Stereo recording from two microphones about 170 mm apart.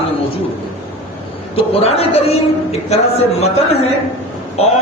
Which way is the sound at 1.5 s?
35° left (ahead or behind).